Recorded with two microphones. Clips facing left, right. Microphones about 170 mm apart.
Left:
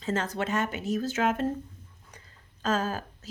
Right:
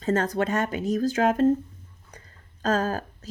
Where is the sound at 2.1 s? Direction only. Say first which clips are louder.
Right 4 dB; 40° right (ahead or behind).